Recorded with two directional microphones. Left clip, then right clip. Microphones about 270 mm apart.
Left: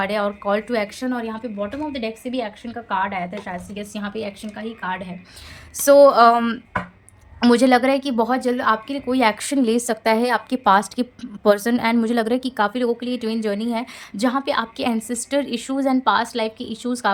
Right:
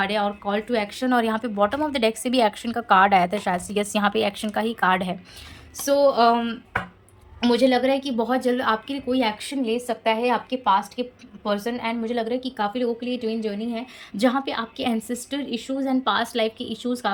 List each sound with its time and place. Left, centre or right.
0.0 s speech: centre
5.8 s a woman's voice: centre
9.6 s a woman's voice: left; by 17.1 s centre